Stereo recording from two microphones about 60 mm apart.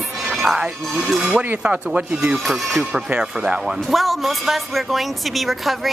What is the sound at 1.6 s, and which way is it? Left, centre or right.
Speech, right.